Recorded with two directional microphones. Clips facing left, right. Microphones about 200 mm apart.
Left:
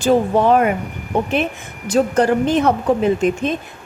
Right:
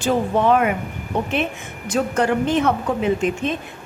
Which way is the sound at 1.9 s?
35° left (ahead or behind).